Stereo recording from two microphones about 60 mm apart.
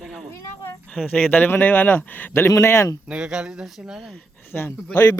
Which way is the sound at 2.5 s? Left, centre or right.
Left.